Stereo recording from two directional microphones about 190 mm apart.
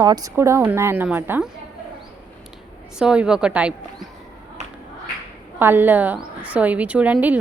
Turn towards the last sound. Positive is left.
turn(degrees=-10)  # may be behind; listen again after turning